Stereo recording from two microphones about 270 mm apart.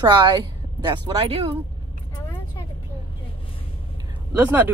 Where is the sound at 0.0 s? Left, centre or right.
Centre.